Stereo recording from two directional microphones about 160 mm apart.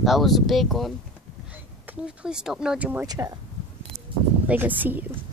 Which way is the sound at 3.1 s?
25° right (ahead or behind).